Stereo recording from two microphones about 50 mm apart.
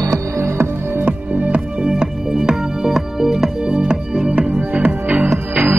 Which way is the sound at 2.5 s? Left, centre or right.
Centre.